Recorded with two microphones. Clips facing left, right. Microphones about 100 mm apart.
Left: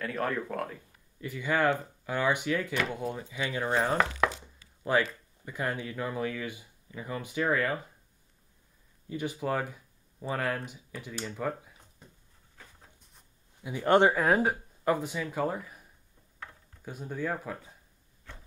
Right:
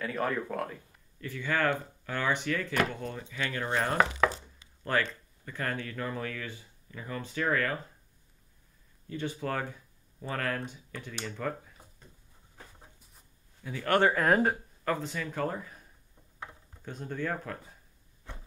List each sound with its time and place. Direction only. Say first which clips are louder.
0.0 s speech: even; centre (ahead or behind)
1.2 s speech: left 2 dB; 15° left (ahead or behind)
9.1 s speech: left 2 dB; 10° left (ahead or behind)
13.6 s speech: left 3 dB; 15° left (ahead or behind)
14.1 s speech: even; 5° left (ahead or behind)
16.4 s a sound: right 2 dB; 20° right (ahead or behind)
16.8 s speech: left 1 dB; 10° left (ahead or behind)